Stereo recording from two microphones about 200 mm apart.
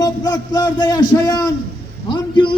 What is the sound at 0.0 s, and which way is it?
A man's voice, 20° left (ahead or behind).